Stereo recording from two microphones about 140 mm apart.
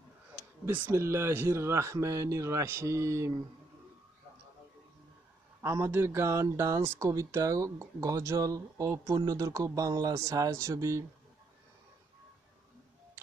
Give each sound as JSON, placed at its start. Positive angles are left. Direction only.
{"t": 0.7, "sound": "speech", "side_deg": -15}
{"t": 5.6, "sound": "speech", "side_deg": -20}